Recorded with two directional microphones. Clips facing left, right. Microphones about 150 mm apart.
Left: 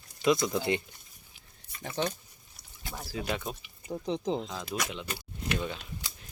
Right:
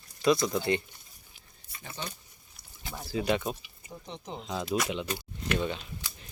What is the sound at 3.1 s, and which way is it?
Speech, centre (ahead or behind).